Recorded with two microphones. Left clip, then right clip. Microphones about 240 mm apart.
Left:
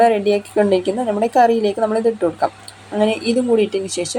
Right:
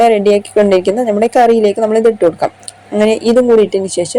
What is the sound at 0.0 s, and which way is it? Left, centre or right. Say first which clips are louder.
Speech: right 5 dB; right.